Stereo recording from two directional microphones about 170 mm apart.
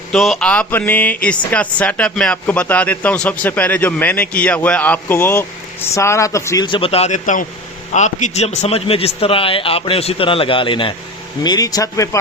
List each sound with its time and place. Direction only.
0.1 s speech: centre (ahead or behind)
6.7 s speech: 30° left (ahead or behind)